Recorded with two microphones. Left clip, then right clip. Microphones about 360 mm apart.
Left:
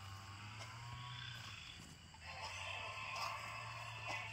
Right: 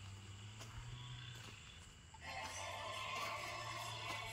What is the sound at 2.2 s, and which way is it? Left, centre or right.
Music, right.